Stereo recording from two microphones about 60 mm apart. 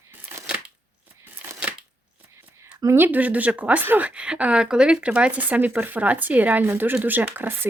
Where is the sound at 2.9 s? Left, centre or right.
Right.